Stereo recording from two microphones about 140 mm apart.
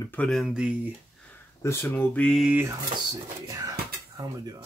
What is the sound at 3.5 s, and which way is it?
Speech, 25° right (ahead or behind).